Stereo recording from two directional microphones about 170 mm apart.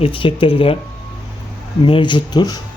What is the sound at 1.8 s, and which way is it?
Speech, 30° left (ahead or behind).